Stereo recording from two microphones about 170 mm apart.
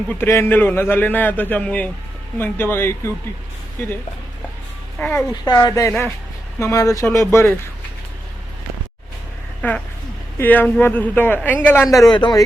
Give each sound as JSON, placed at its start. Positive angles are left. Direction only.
{"t": 0.1, "sound": "speech", "side_deg": 15}
{"t": 4.9, "sound": "a child's voice", "side_deg": 10}
{"t": 5.3, "sound": "speech", "side_deg": 25}
{"t": 9.6, "sound": "speech", "side_deg": 5}